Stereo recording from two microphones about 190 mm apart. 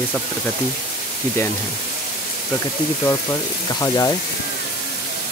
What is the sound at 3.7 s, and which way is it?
Speech, 20° left (ahead or behind).